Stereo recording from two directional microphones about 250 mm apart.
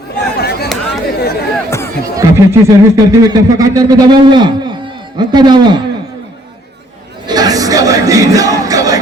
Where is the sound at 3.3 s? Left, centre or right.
Centre.